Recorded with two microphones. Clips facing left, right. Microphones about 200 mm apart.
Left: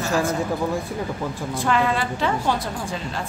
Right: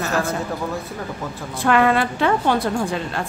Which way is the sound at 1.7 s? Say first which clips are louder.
Right 5 dB; 60° right (ahead or behind).